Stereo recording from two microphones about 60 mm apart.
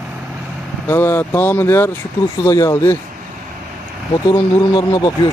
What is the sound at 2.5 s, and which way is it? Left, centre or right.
Speech, left.